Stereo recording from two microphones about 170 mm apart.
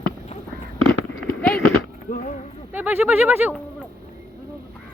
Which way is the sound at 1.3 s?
5° left (ahead or behind).